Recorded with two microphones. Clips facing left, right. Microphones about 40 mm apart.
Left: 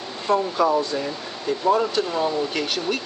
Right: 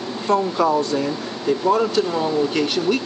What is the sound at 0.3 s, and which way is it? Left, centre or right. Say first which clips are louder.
Speech: right 2 dB; centre.